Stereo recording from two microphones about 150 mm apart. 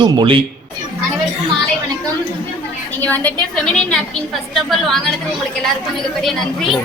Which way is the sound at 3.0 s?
10° left (ahead or behind).